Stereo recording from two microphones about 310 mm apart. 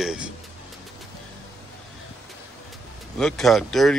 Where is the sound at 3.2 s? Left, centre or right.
Centre.